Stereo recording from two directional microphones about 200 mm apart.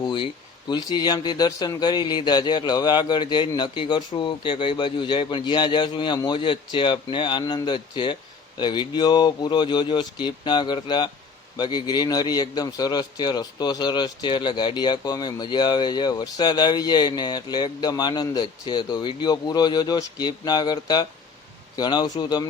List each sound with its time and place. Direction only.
0.0 s a man's voice: 25° left (ahead or behind)